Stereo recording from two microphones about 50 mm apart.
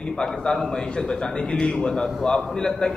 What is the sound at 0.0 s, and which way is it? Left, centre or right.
A man's voice, centre.